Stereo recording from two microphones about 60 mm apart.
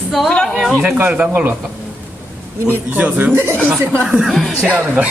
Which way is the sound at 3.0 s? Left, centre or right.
Right.